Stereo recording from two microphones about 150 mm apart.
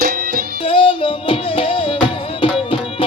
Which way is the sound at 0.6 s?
35° left (ahead or behind).